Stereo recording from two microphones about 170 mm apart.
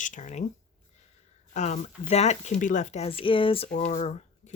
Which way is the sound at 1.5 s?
40° left (ahead or behind).